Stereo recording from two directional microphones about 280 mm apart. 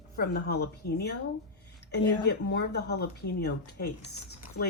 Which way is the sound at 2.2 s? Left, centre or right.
Left.